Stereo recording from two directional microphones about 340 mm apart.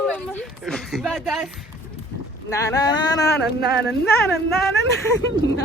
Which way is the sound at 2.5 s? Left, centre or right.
Centre.